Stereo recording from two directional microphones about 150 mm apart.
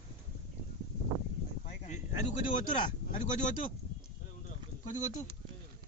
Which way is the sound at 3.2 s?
55° left (ahead or behind).